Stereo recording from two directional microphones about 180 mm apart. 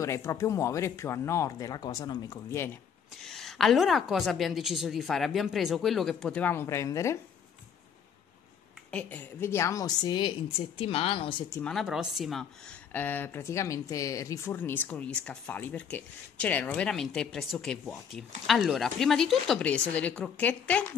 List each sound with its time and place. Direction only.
0.0 s speech: 15° left (ahead or behind)
3.2 s a woman's voice: centre (ahead or behind)
8.9 s a woman's voice: 10° left (ahead or behind); by 11.4 s 30° left (ahead or behind)
11.5 s speech: 5° left (ahead or behind)